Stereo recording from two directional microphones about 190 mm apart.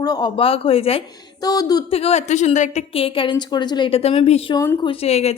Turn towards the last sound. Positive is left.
turn(degrees=35)  # may be behind; listen again after turning